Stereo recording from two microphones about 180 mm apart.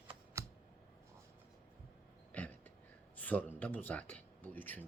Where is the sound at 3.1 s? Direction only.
10° left (ahead or behind).